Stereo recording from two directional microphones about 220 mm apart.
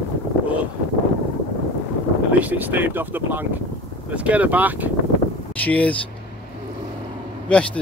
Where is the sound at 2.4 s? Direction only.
10° right (ahead or behind).